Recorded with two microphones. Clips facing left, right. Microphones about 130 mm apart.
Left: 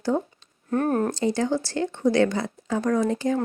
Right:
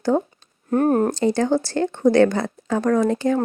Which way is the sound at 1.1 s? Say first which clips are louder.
Right 5 dB; 55° right (ahead or behind).